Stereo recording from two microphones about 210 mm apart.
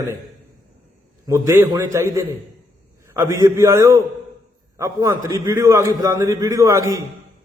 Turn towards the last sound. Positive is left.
turn(degrees=-15)  # may be behind; listen again after turning